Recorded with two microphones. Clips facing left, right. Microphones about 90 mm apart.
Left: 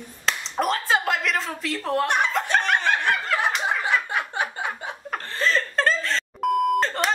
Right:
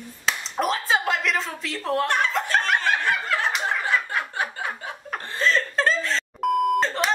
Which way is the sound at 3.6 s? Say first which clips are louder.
Left 1 dB; 15° left (ahead or behind).